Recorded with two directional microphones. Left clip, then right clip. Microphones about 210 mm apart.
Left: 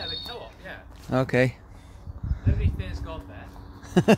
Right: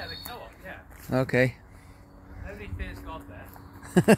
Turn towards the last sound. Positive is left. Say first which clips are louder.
# even
turn(degrees=-5)  # may be behind; listen again after turning